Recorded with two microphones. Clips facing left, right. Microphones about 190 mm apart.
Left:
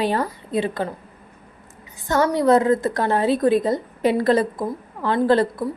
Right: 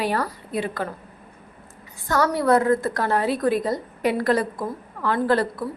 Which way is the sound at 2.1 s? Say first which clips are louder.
Left 3 dB; 25° left (ahead or behind).